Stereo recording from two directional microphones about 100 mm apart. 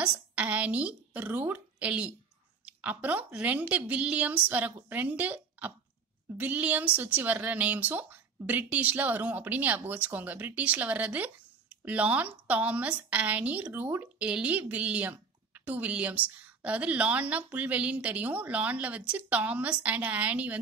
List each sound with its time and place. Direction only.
0.0 s a woman's voice: 15° right (ahead or behind)